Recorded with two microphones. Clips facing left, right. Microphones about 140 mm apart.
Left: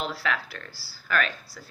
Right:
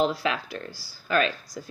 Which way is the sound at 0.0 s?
20° right (ahead or behind).